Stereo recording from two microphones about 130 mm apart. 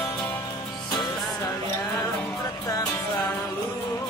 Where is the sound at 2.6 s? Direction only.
25° left (ahead or behind).